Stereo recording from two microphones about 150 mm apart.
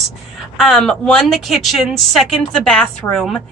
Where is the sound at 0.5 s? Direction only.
Centre (ahead or behind).